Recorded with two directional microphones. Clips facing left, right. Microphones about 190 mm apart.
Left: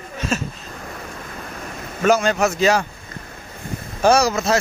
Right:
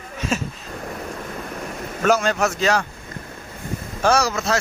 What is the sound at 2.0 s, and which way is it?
Speech, centre (ahead or behind).